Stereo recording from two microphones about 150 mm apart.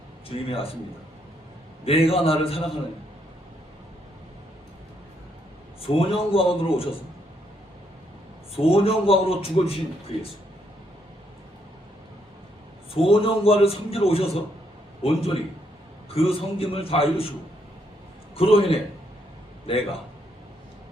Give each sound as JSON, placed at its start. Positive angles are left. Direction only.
{"t": 0.3, "sound": "a man's voice", "side_deg": 40}
{"t": 1.8, "sound": "a man's voice", "side_deg": 40}
{"t": 6.1, "sound": "a man's voice", "side_deg": 40}
{"t": 8.5, "sound": "a man's voice", "side_deg": 40}
{"t": 12.9, "sound": "a man's voice", "side_deg": 40}
{"t": 18.3, "sound": "a man's voice", "side_deg": 40}